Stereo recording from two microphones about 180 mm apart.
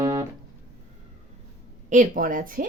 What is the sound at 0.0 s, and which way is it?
Music, 25° right (ahead or behind).